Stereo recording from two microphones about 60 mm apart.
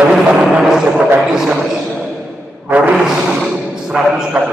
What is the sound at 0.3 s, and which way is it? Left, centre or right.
Music, centre.